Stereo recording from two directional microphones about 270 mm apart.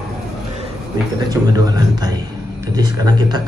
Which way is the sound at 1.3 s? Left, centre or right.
Centre.